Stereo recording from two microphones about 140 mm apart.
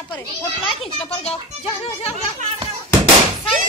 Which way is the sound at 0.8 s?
45° left (ahead or behind).